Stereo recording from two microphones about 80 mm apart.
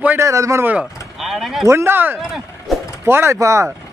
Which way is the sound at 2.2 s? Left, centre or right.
Centre.